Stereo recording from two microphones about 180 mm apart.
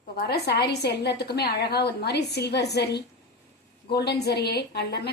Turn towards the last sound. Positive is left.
turn(degrees=65)  # may be behind; listen again after turning